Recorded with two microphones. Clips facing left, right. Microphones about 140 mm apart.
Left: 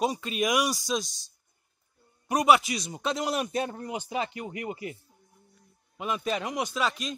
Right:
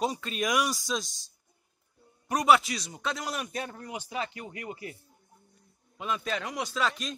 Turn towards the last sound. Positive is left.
turn(degrees=10)  # may be behind; listen again after turning